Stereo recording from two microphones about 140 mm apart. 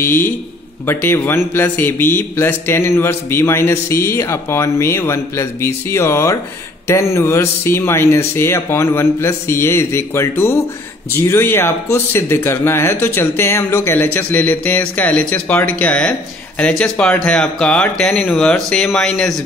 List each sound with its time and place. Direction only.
0.8 s a man's voice: 15° left (ahead or behind)